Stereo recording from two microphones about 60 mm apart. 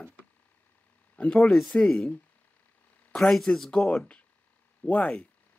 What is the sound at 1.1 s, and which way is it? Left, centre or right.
Speech, centre.